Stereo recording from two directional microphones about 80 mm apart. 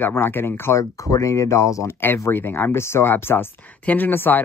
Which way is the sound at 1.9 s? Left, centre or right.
Left.